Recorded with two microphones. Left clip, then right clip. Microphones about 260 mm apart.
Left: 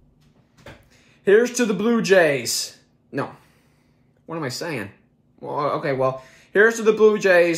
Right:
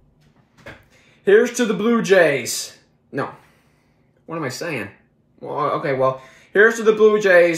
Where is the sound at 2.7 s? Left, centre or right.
Centre.